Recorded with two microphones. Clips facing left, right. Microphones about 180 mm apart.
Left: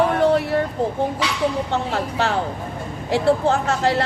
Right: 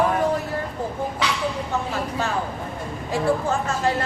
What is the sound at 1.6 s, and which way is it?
Speech, 75° left (ahead or behind).